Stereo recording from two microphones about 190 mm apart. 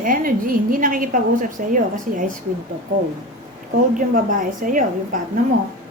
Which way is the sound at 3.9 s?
45° right (ahead or behind).